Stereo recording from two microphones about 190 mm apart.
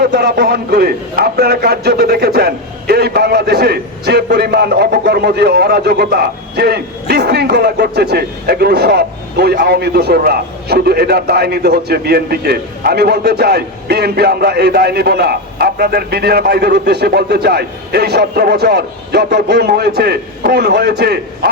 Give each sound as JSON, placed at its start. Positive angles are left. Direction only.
{"t": 0.0, "sound": "a man's voice", "side_deg": -55}